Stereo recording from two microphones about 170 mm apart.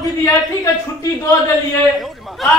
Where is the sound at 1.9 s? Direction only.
Centre (ahead or behind).